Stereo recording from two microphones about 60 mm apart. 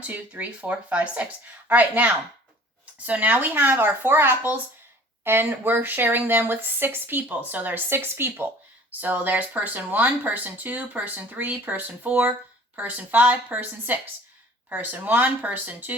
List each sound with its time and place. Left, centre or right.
0.0 s speech: right